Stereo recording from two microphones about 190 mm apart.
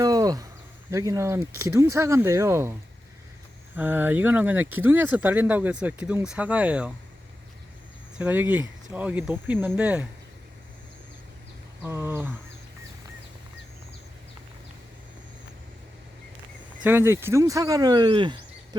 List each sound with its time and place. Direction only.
0.0 s insect: 20° right (ahead or behind)
0.9 s speech: 15° right (ahead or behind)
3.8 s speech: 10° right (ahead or behind)
8.2 s speech: 10° right (ahead or behind)
11.8 s speech: 10° right (ahead or behind)
16.8 s speech: 10° right (ahead or behind)